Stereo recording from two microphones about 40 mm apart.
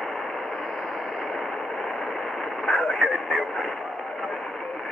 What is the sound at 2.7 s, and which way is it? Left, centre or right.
Vehicle, centre.